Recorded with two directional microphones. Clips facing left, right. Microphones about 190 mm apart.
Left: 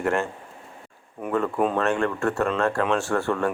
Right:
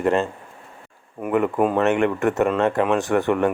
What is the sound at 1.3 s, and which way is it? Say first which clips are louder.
Speech: right 4 dB; 10° right (ahead or behind).